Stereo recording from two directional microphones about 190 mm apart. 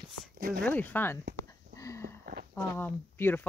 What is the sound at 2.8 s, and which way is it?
Speech, 10° left (ahead or behind).